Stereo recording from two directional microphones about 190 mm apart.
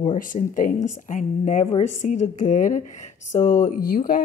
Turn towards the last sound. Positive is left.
turn(degrees=50)  # may be behind; listen again after turning